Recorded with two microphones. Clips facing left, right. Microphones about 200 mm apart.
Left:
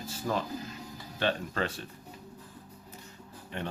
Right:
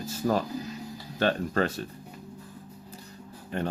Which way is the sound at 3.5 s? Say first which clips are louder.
Right 6 dB; 40° right (ahead or behind).